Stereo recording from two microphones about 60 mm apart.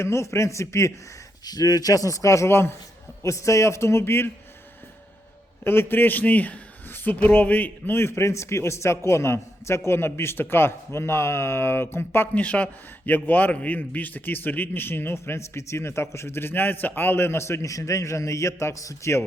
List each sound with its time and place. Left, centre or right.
0.0 s a man's voice: left
1.5 s a man's voice: left
3.2 s a man's voice: left
5.6 s a man's voice: left
7.9 s a man's voice: left
12.3 s a man's voice: left